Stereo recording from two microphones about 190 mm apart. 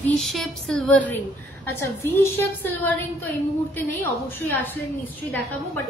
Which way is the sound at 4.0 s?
10° left (ahead or behind).